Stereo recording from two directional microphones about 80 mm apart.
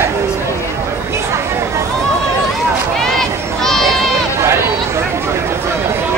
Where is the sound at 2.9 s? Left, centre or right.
Centre.